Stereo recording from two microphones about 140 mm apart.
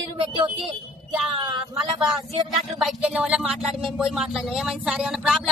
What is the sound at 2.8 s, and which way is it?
Speech, 5° right (ahead or behind).